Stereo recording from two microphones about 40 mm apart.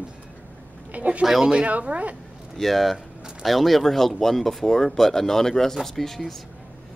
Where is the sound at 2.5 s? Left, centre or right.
Centre.